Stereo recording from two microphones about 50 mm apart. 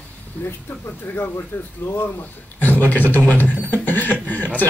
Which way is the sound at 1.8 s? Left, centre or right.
Left.